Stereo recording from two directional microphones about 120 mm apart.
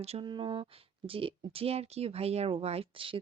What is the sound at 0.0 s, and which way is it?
Speech, 60° right (ahead or behind).